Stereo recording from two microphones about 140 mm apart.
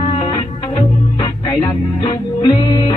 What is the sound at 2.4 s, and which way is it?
Music, 25° left (ahead or behind).